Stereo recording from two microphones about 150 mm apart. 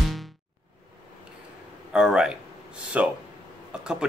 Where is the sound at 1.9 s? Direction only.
5° right (ahead or behind).